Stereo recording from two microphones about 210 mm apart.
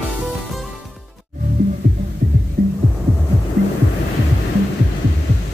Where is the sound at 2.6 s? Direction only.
40° right (ahead or behind).